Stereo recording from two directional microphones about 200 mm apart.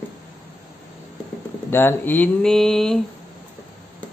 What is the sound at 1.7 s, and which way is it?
Speech, 10° left (ahead or behind).